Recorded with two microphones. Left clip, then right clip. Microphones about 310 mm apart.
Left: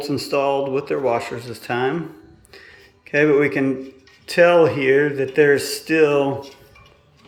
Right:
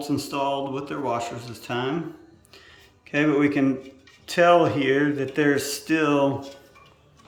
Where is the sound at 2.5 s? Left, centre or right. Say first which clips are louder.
Left 7 dB; centre.